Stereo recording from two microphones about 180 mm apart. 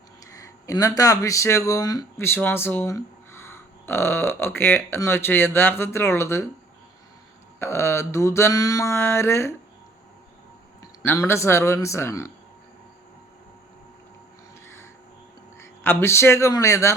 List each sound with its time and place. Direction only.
0.3 s speech: 20° left (ahead or behind)
7.6 s speech: 15° left (ahead or behind)
11.0 s speech: 15° left (ahead or behind)
15.6 s speech: 10° left (ahead or behind)